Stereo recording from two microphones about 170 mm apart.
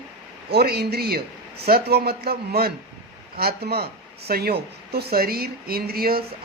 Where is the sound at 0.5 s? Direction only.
65° right (ahead or behind).